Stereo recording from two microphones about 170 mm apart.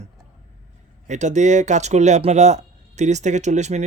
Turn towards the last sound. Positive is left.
turn(degrees=-45)  # may be behind; listen again after turning